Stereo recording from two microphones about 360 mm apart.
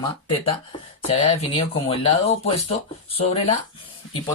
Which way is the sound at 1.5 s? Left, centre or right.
Centre.